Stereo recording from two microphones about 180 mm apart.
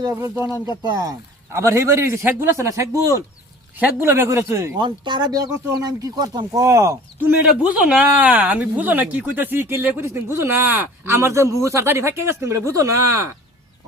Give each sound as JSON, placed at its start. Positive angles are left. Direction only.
{"t": 0.0, "sound": "speech", "side_deg": -15}
{"t": 4.8, "sound": "speech", "side_deg": -25}